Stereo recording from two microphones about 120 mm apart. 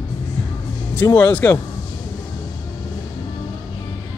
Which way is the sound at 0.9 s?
15° left (ahead or behind).